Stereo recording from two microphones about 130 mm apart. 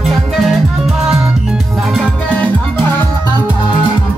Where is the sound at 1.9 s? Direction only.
10° left (ahead or behind).